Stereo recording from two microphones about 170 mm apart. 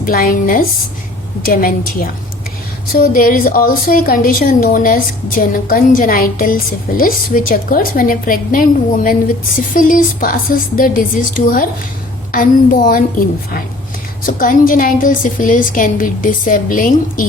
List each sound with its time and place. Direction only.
0.0 s a woman's voice: 55° left (ahead or behind)